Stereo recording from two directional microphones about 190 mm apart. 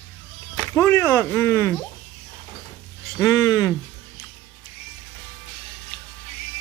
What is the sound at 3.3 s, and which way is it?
Speech, 15° left (ahead or behind).